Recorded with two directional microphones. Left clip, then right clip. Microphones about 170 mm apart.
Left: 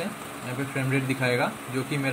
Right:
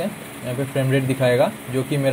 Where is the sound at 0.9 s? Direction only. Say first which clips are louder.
Right 7 dB; 25° right (ahead or behind).